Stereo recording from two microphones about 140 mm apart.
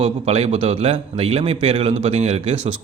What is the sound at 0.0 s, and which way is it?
Speech, 50° right (ahead or behind).